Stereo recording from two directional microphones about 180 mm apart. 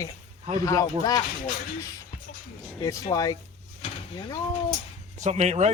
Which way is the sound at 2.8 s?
20° left (ahead or behind).